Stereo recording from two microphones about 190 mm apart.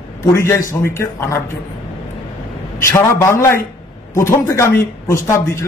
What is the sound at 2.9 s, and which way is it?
Speech, 15° left (ahead or behind).